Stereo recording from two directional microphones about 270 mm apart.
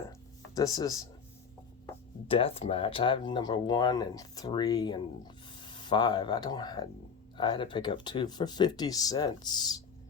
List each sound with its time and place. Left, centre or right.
0.5 s speech: centre
2.2 s speech: left